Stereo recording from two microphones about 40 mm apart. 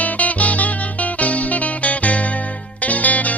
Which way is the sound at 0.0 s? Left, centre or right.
Left.